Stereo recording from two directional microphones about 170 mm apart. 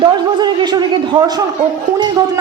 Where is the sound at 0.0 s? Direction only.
25° right (ahead or behind).